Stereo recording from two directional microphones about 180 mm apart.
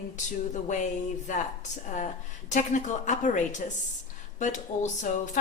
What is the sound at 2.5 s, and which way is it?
Speech, 45° left (ahead or behind).